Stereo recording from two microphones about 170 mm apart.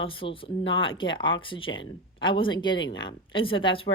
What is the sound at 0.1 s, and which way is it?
Speech, 30° left (ahead or behind).